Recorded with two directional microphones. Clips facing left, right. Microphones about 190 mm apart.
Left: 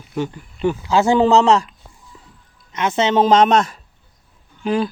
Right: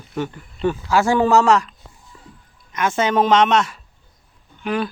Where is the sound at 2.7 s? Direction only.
20° left (ahead or behind).